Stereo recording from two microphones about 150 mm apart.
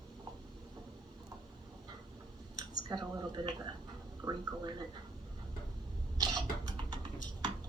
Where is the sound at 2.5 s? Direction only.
30° right (ahead or behind).